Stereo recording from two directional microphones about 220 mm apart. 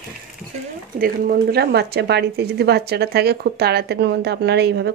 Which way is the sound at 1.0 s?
45° right (ahead or behind).